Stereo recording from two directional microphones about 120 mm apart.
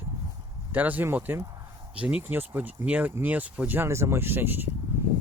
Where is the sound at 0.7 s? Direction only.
15° right (ahead or behind).